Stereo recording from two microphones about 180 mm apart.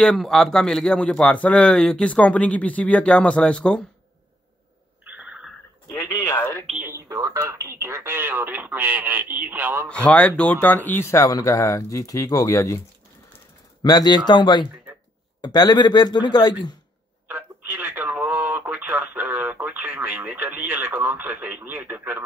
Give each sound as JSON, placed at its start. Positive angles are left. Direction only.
{"t": 0.0, "sound": "a man's voice", "side_deg": 5}
{"t": 5.0, "sound": "a sound", "side_deg": -5}
{"t": 5.9, "sound": "speech", "side_deg": 15}
{"t": 6.7, "sound": "speech", "side_deg": -10}
{"t": 10.0, "sound": "speech", "side_deg": 5}
{"t": 13.8, "sound": "a man's voice", "side_deg": 20}
{"t": 17.3, "sound": "radio", "side_deg": -10}